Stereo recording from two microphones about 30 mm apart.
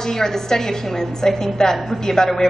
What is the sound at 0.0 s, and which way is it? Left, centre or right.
A woman's voice, centre.